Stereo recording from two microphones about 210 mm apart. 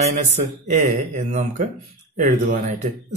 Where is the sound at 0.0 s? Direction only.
35° right (ahead or behind).